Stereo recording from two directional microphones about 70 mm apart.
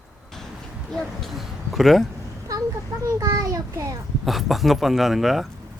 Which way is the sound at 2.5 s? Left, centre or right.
Right.